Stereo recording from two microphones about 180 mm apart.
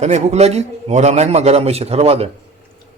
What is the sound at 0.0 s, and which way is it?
A man's voice, 40° right (ahead or behind).